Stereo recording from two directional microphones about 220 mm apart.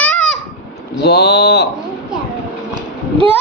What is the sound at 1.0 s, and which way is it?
Speech, 50° left (ahead or behind).